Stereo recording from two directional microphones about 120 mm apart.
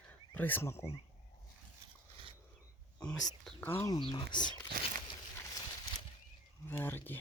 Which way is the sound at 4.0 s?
40° left (ahead or behind).